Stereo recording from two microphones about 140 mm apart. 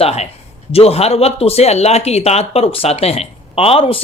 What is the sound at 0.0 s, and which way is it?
Speech, 45° left (ahead or behind).